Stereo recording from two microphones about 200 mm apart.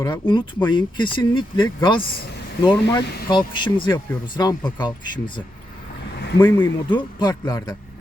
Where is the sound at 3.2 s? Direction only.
25° left (ahead or behind).